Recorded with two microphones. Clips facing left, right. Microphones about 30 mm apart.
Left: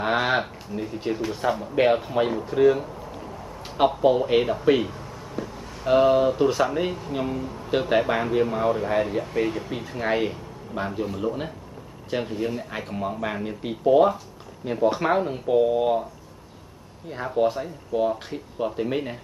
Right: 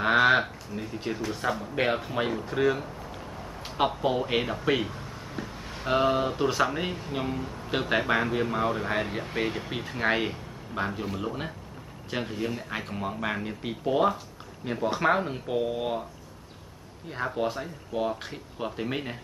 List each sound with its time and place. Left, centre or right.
0.0 s a sound: centre
1.2 s speech: centre
17.1 s speech: centre